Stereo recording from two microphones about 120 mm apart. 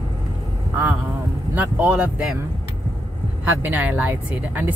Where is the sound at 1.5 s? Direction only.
15° right (ahead or behind).